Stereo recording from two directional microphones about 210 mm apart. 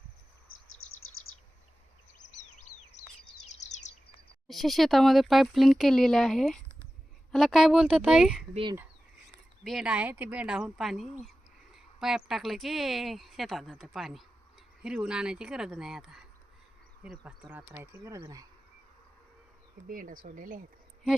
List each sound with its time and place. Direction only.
0.8 s bird: 80° left
2.2 s a sound: 35° left (ahead or behind)
3.6 s bird: 35° left (ahead or behind)
4.4 s speech: centre (ahead or behind)
9.6 s speech: centre (ahead or behind)
19.9 s speech: 40° right (ahead or behind)